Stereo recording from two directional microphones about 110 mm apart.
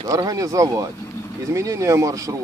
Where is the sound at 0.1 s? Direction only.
35° right (ahead or behind).